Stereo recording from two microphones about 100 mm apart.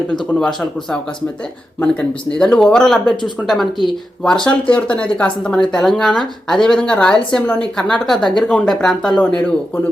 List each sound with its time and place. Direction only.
0.1 s speech: 5° left (ahead or behind)
9.1 s speech: 15° left (ahead or behind)